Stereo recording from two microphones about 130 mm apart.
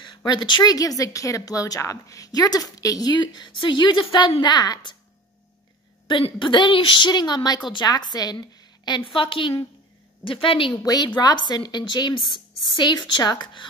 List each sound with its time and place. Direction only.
0.0 s speech: 35° left (ahead or behind)
6.0 s a woman's voice: 40° left (ahead or behind)